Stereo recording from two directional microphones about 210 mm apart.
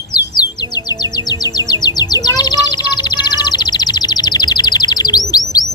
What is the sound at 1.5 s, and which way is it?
Music, 20° left (ahead or behind).